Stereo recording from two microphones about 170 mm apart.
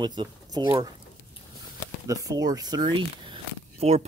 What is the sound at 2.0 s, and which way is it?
Speech, 20° right (ahead or behind).